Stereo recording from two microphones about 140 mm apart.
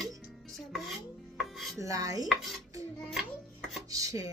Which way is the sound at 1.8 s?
25° right (ahead or behind).